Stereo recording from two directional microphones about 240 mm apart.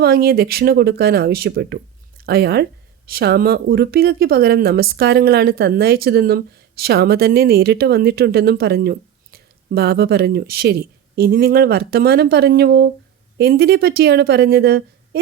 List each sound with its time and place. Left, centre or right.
0.0 s speech: right